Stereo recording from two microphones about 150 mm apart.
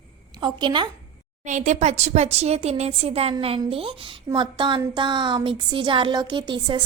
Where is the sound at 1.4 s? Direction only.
55° right (ahead or behind).